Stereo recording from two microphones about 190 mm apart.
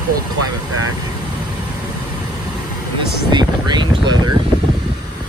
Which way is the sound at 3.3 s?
25° right (ahead or behind).